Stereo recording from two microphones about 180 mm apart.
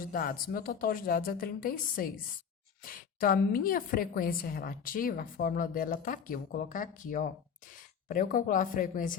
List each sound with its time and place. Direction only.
0.0 s a woman's voice: 50° left (ahead or behind)